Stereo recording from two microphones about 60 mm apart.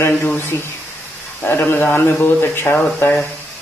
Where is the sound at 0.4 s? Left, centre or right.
Left.